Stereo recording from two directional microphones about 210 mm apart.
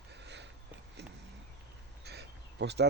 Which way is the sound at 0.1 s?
55° right (ahead or behind).